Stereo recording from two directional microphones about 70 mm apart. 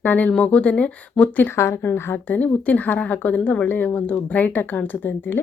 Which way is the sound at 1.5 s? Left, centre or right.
Left.